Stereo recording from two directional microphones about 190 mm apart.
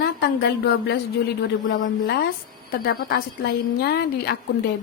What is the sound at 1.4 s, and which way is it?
Speech, 75° left (ahead or behind).